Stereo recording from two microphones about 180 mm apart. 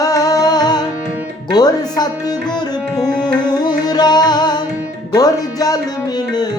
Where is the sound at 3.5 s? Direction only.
20° left (ahead or behind).